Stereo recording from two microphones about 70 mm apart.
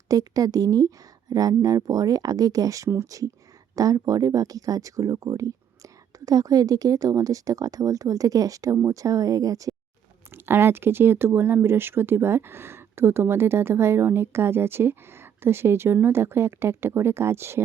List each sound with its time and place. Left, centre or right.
0.1 s speech: right
10.3 s speech: right